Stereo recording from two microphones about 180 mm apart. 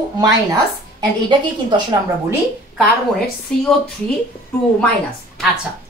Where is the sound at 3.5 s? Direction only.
5° left (ahead or behind).